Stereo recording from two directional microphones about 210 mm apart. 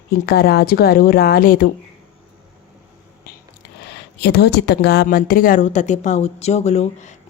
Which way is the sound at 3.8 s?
50° left (ahead or behind).